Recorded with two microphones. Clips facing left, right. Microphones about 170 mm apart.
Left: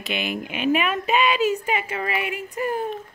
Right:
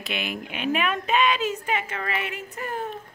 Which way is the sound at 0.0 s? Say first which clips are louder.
Left 4 dB; centre (ahead or behind).